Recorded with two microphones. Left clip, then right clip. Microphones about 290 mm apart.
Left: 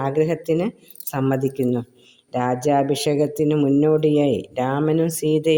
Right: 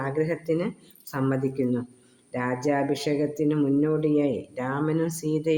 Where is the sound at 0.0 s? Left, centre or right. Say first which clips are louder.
Left 6 dB; left.